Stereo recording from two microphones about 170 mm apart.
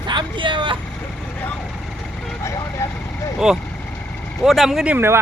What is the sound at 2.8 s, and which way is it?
Speech, 15° left (ahead or behind).